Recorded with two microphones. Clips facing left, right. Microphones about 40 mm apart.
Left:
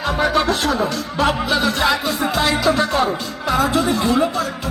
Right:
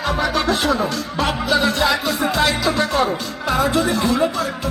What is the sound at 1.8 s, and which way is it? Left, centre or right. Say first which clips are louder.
Speech: even; left.